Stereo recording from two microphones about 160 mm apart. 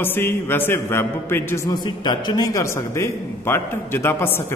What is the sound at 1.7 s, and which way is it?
A man's voice, 25° left (ahead or behind).